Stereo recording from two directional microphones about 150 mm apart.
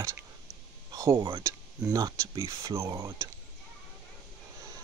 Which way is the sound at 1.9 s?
25° right (ahead or behind).